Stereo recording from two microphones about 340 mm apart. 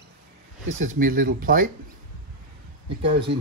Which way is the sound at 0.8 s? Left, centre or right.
Right.